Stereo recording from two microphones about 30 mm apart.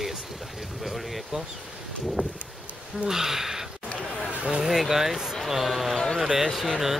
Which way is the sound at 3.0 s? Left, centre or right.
Centre.